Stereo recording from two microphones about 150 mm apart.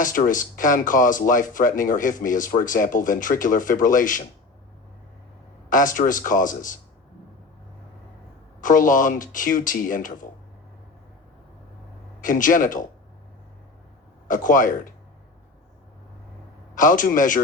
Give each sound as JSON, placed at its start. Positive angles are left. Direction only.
{"t": 0.0, "sound": "speech", "side_deg": 60}
{"t": 5.6, "sound": "speech", "side_deg": 60}
{"t": 8.6, "sound": "speech", "side_deg": 60}
{"t": 12.2, "sound": "speech", "side_deg": 65}
{"t": 14.3, "sound": "speech", "side_deg": 60}
{"t": 16.7, "sound": "speech", "side_deg": 60}